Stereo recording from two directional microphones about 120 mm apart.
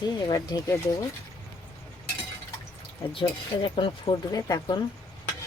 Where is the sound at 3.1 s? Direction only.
45° left (ahead or behind).